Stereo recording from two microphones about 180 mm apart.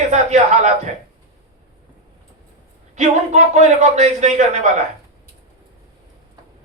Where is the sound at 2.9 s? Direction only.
40° right (ahead or behind).